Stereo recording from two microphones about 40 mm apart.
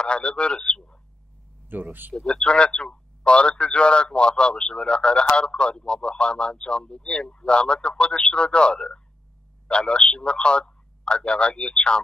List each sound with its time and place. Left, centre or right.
0.0 s a man's voice: left
1.7 s speech: right
2.1 s a man's voice: left